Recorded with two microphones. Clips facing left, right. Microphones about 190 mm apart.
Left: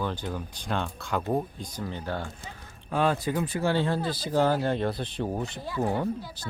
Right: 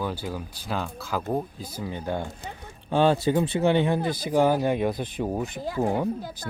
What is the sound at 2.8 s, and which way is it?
Speech, 30° right (ahead or behind).